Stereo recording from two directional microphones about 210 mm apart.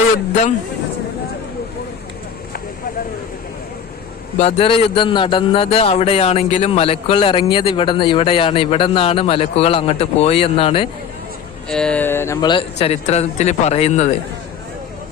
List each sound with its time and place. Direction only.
4.4 s a man's voice: 30° left (ahead or behind)
11.7 s a man's voice: 5° left (ahead or behind); by 14.1 s 30° left (ahead or behind)